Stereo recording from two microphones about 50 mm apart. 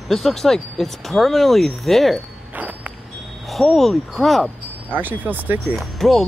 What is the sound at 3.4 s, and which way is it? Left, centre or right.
Speech, centre.